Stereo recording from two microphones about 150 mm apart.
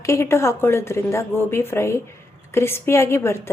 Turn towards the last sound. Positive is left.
turn(degrees=20)  # may be behind; listen again after turning